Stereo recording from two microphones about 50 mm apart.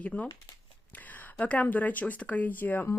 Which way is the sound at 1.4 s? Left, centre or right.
Left.